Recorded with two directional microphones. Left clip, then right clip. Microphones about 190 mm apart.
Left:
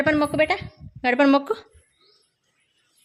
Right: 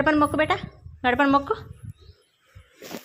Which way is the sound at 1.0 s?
35° left (ahead or behind).